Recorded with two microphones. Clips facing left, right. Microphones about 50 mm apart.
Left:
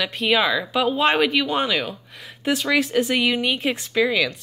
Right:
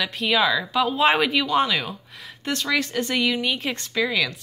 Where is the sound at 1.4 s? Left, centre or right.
Centre.